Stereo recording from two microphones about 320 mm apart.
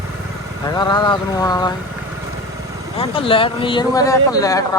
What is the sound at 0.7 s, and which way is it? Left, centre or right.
Speech, centre.